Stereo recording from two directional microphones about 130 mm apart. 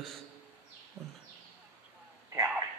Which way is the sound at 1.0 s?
25° right (ahead or behind).